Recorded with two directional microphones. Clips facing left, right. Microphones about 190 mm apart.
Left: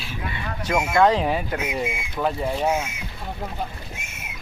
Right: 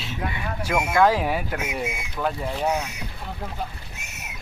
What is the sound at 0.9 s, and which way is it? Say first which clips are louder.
Speech: left 1 dB; 5° right (ahead or behind).